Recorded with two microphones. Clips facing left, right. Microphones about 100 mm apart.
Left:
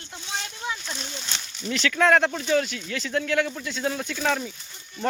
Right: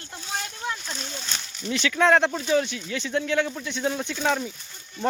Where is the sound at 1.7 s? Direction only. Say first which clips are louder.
Even; 20° right (ahead or behind).